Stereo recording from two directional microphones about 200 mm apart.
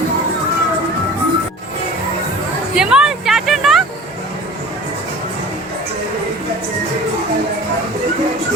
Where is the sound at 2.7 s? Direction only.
5° right (ahead or behind).